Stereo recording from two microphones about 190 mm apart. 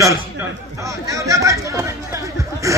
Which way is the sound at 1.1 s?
15° right (ahead or behind).